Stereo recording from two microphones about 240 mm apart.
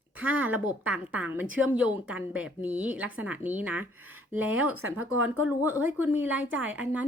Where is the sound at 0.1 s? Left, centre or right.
Centre.